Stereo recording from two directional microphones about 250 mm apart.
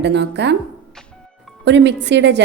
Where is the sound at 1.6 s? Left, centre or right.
Right.